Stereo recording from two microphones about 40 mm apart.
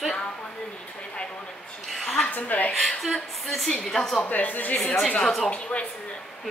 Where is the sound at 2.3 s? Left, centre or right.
Left.